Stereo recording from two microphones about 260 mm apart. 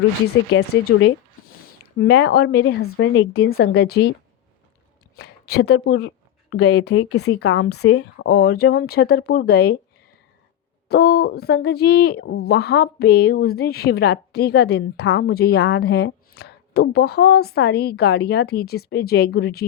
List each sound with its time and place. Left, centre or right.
2.0 s speech: left
2.8 s a woman's voice: left
5.1 s a sound: left
5.7 s speech: left
7.3 s speech: left
10.8 s speech: left